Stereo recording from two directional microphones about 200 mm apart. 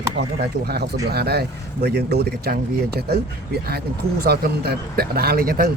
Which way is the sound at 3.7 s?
50° right (ahead or behind).